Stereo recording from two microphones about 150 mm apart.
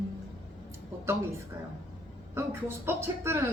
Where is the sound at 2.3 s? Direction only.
15° right (ahead or behind).